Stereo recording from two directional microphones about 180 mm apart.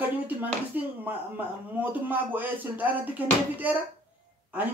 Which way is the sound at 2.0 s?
10° right (ahead or behind).